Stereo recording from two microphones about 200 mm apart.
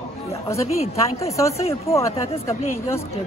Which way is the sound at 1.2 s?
15° left (ahead or behind).